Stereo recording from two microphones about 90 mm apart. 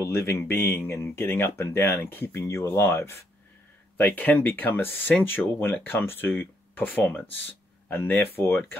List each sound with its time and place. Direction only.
0.0 s speech: 30° left (ahead or behind)